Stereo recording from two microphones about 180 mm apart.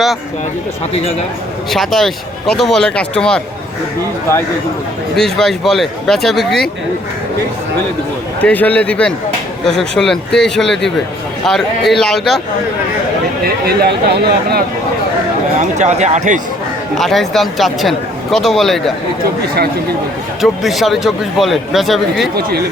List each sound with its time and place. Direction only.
1.7 s speech: centre (ahead or behind)
5.1 s speech: centre (ahead or behind)
8.4 s a man's voice: 10° left (ahead or behind)
13.4 s speech: 60° right (ahead or behind)
15.5 s speech: 40° right (ahead or behind)
17.0 s speech: centre (ahead or behind)
20.4 s speech: centre (ahead or behind)
22.4 s speech: 60° right (ahead or behind)